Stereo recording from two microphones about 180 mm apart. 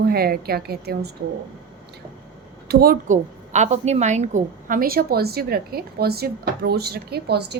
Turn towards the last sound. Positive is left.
turn(degrees=-65)  # may be behind; listen again after turning